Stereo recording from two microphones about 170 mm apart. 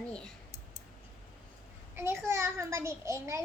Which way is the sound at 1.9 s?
15° right (ahead or behind).